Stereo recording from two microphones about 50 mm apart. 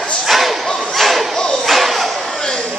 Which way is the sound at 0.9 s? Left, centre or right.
Centre.